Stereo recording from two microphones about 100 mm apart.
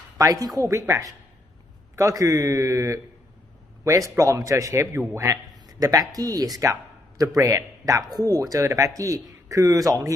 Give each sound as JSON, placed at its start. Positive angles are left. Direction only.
{"t": 0.2, "sound": "speech", "side_deg": -35}